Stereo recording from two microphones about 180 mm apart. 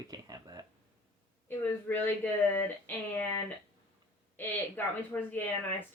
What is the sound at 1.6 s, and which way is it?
Speech, 10° left (ahead or behind).